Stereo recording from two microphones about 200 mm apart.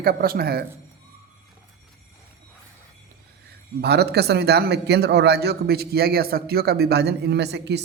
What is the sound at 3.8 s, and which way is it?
A man's voice, 55° right (ahead or behind).